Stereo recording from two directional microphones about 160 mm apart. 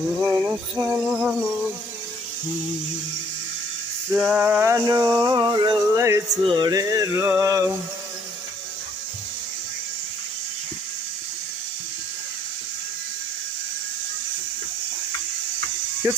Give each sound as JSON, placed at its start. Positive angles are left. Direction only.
{"t": 0.2, "sound": "a sound", "side_deg": -15}
{"t": 4.1, "sound": "male singing", "side_deg": -5}
{"t": 6.4, "sound": "speech", "side_deg": -25}
{"t": 16.0, "sound": "speech", "side_deg": -15}